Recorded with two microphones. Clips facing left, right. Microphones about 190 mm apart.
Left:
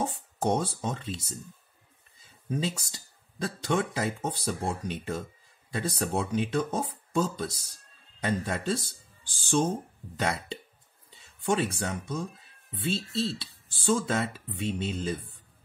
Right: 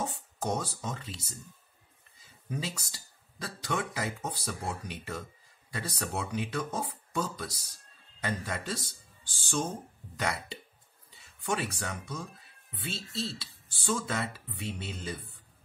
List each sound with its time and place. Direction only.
0.0 s a sound: 25° left (ahead or behind)
0.8 s speech: 25° left (ahead or behind)
2.5 s speech: 25° left (ahead or behind)
10.1 s speech: 25° left (ahead or behind)